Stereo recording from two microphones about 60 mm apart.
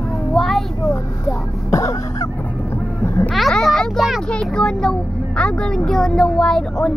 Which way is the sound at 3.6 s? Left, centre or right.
Centre.